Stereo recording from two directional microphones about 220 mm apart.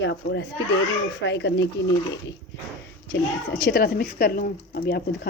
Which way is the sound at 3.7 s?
45° left (ahead or behind).